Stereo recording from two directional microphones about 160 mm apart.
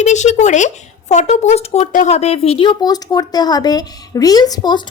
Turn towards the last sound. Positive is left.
turn(degrees=25)  # may be behind; listen again after turning